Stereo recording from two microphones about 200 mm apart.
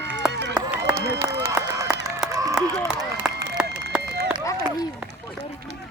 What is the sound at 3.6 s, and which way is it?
Run, 5° right (ahead or behind).